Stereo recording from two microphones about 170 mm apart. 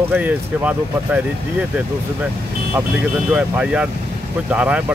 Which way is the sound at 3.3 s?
5° right (ahead or behind).